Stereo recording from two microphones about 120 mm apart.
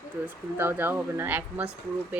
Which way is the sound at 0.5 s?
15° right (ahead or behind).